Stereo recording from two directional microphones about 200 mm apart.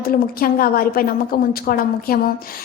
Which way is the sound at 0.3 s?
45° left (ahead or behind).